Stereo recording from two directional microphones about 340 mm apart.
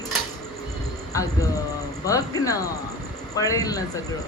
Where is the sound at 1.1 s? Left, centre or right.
Centre.